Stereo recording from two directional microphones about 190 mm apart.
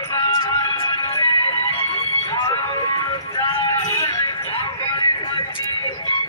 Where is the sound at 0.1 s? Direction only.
20° left (ahead or behind).